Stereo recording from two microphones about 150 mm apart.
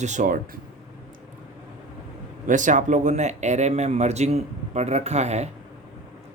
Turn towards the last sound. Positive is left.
turn(degrees=-45)  # may be behind; listen again after turning